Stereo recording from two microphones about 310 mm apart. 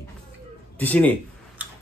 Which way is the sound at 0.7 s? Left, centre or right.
Centre.